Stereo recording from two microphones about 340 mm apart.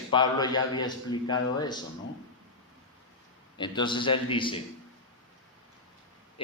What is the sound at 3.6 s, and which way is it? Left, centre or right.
A man's voice, centre.